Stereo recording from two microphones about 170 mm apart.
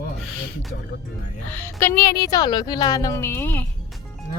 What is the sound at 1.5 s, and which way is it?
A woman's voice, 15° left (ahead or behind).